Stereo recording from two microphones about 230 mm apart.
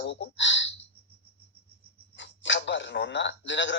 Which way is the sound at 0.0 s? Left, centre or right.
Left.